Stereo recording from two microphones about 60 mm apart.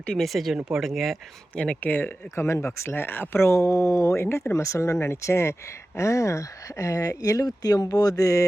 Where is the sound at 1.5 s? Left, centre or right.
Centre.